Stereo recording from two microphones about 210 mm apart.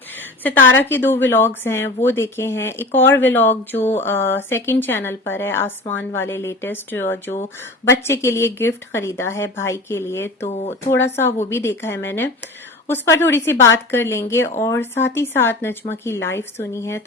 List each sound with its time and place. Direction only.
0.2 s a woman's voice: 10° left (ahead or behind)
10.4 s speech: 30° left (ahead or behind)
10.9 s a woman's voice: 10° left (ahead or behind)